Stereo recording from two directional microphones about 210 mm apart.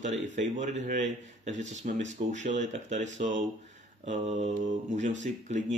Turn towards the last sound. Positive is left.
turn(degrees=-35)  # may be behind; listen again after turning